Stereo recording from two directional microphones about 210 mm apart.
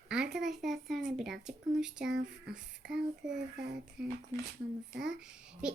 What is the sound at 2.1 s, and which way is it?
Speech, 50° right (ahead or behind).